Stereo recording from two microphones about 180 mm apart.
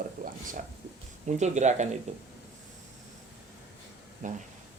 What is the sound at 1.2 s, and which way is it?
Speech, 40° right (ahead or behind).